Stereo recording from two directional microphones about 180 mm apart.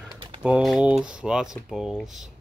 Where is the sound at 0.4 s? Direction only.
5° right (ahead or behind).